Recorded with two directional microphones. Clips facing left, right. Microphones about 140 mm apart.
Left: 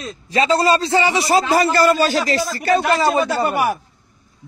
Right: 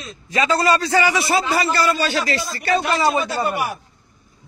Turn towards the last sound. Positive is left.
turn(degrees=45)  # may be behind; listen again after turning